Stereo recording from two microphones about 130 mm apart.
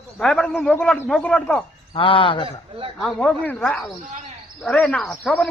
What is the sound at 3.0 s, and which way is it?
A man's voice, 5° left (ahead or behind).